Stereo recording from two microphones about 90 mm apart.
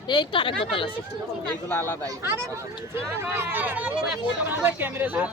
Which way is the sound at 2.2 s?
30° right (ahead or behind).